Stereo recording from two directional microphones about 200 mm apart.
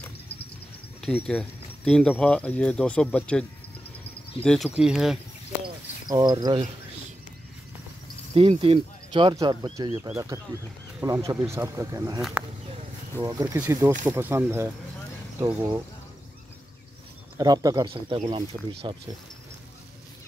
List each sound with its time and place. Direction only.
1.0 s speech: 5° left (ahead or behind)
6.0 s speech: 20° right (ahead or behind)
8.4 s speech: 30° right (ahead or behind)
11.0 s speech: 15° right (ahead or behind)
12.2 s speech: centre (ahead or behind)
13.2 s speech: 15° right (ahead or behind)
17.4 s speech: 20° right (ahead or behind)